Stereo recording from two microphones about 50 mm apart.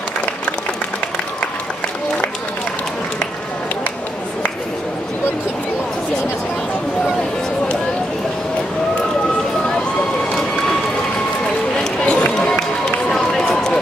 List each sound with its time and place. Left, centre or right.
11.8 s run: centre